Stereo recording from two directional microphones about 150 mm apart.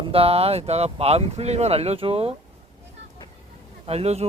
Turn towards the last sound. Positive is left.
turn(degrees=-45)  # may be behind; listen again after turning